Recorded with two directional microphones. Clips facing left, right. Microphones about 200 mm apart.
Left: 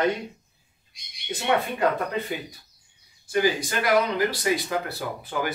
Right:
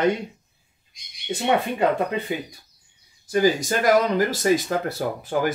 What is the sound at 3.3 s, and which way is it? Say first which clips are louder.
Speech: right 4 dB; 45° right (ahead or behind).